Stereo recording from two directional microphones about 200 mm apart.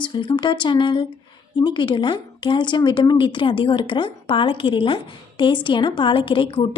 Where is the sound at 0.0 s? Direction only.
25° left (ahead or behind).